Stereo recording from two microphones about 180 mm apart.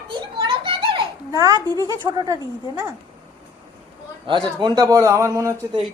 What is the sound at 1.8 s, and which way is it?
Speech, 20° right (ahead or behind).